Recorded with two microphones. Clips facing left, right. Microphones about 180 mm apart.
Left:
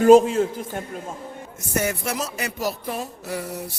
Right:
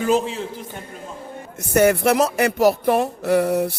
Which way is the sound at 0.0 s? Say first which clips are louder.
Left 7 dB; 45° left (ahead or behind).